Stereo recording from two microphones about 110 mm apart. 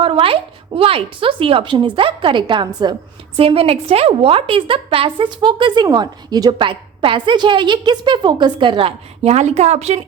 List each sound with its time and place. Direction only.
0.0 s a woman's voice: 55° right (ahead or behind)
3.3 s a woman's voice: 60° right (ahead or behind); by 8.9 s 45° right (ahead or behind)
9.2 s speech: 85° right